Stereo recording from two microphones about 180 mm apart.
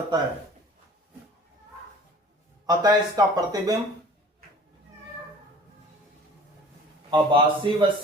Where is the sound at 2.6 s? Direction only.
20° right (ahead or behind).